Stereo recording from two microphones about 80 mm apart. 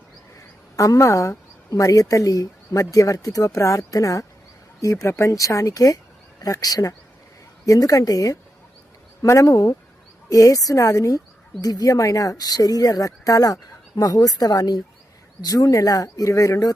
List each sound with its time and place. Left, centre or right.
0.3 s speech: left
9.2 s speech: left